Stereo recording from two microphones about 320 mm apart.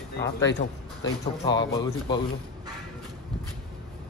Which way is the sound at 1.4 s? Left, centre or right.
Centre.